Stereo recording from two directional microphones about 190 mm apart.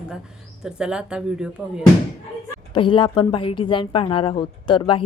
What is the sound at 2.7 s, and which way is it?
A woman's voice, 25° left (ahead or behind).